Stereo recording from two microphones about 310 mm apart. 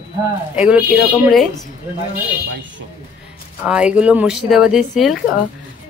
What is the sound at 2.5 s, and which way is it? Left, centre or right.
Speech, right.